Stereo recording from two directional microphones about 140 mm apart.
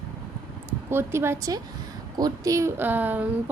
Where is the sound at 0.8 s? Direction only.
15° right (ahead or behind).